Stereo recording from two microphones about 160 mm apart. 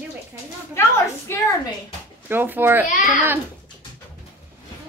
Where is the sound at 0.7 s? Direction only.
15° left (ahead or behind).